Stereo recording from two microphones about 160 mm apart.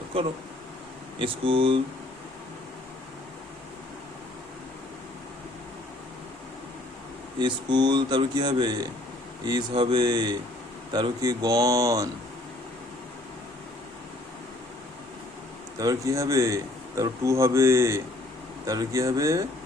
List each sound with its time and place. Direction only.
1.2 s speech: 35° right (ahead or behind)
7.3 s a man's voice: 30° right (ahead or behind)
15.8 s a man's voice: 20° right (ahead or behind)